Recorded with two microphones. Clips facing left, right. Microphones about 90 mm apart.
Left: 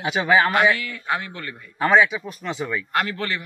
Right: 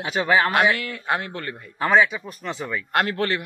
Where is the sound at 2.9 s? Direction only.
50° right (ahead or behind).